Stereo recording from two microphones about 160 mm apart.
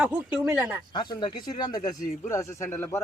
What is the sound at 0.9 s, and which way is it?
Speech, 30° left (ahead or behind).